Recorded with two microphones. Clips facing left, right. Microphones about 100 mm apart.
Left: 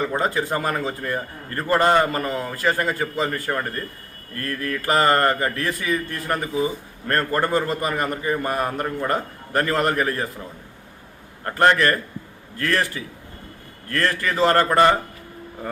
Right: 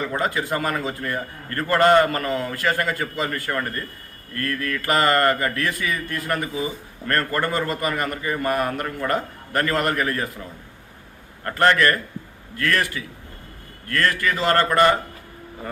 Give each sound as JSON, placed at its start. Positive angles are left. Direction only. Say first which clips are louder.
{"t": 0.0, "sound": "a man's voice", "louder": "left 2 dB", "side_deg": 25}
{"t": 11.4, "sound": "a man's voice", "louder": "left 1 dB", "side_deg": 25}